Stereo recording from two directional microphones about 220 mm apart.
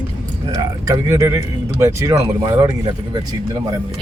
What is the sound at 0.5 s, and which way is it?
Speech, 15° right (ahead or behind).